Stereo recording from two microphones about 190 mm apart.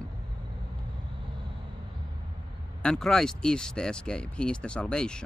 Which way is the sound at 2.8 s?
5° left (ahead or behind).